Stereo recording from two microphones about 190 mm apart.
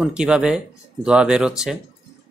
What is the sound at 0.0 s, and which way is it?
Speech, 5° right (ahead or behind).